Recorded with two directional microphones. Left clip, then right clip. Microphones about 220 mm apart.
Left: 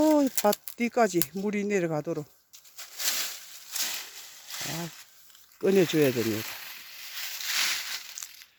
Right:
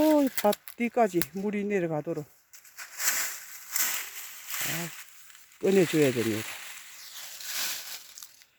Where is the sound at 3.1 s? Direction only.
15° left (ahead or behind).